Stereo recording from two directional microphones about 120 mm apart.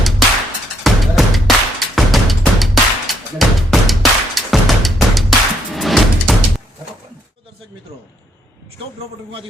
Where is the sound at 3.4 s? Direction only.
Centre (ahead or behind).